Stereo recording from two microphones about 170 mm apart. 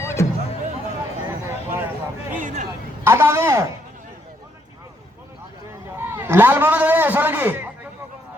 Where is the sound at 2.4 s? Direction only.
45° right (ahead or behind).